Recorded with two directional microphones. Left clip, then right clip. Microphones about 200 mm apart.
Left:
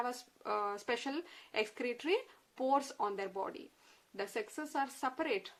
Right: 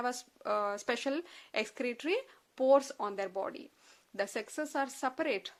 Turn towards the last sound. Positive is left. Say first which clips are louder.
# right 3 dB
turn(degrees=-35)  # may be behind; listen again after turning